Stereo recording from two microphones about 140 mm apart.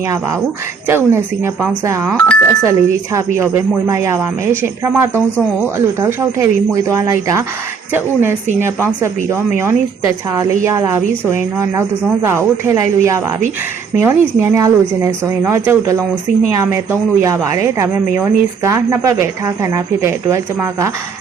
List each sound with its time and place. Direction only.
0.9 s speech: 15° right (ahead or behind)
2.1 s speech: 10° left (ahead or behind)
2.6 s speech: 20° right (ahead or behind)